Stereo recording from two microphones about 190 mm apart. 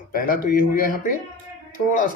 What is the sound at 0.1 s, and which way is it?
Speech, 50° left (ahead or behind).